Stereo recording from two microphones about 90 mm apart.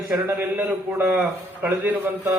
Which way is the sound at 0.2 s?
20° right (ahead or behind).